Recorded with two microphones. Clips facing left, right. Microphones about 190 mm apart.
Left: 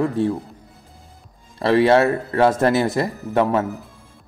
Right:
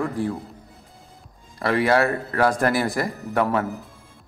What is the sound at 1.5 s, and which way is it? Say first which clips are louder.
A man's voice: left 5 dB; 30° left (ahead or behind).